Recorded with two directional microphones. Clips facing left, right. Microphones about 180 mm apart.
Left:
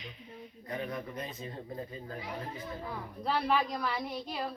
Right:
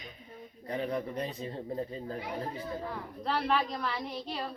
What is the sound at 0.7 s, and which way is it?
Speech, 30° right (ahead or behind).